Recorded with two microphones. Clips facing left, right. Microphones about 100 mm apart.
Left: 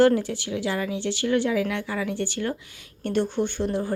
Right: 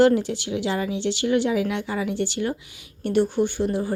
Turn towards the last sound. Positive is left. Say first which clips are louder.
# right 2 dB
turn(degrees=-10)  # may be behind; listen again after turning